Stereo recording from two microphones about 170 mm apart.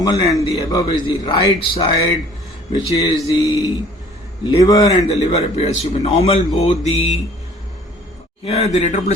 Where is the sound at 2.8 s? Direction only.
40° left (ahead or behind).